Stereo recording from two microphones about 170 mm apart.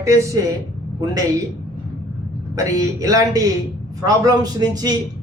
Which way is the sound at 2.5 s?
20° right (ahead or behind).